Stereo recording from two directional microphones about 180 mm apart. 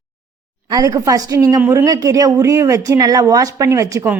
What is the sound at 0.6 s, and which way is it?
A woman's voice, 20° right (ahead or behind).